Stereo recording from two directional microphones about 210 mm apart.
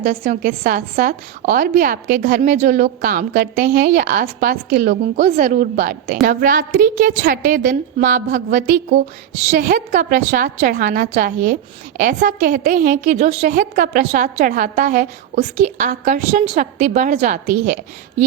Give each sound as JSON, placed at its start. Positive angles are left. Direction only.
{"t": 0.0, "sound": "a woman's voice", "side_deg": -40}